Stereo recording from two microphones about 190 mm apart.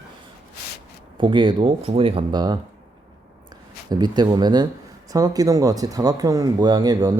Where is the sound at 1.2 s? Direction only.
25° right (ahead or behind).